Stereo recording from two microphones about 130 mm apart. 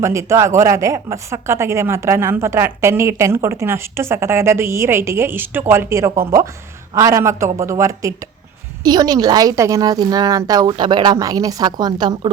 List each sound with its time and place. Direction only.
0.0 s a woman's voice: 20° right (ahead or behind)